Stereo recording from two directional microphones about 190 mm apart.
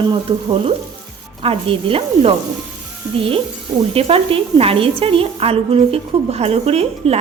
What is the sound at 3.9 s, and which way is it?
A woman's voice, 30° right (ahead or behind).